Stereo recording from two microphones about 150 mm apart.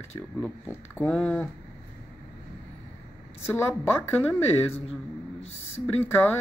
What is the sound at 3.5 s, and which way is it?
Speech, 15° left (ahead or behind).